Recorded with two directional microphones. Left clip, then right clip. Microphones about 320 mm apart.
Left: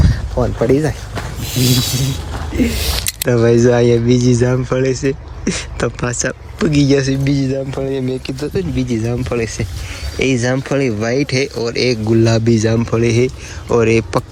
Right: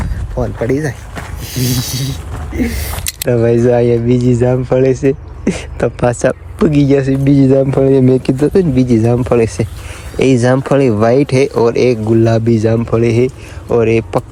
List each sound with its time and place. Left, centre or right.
0.3 s speech: centre
8.5 s speech: centre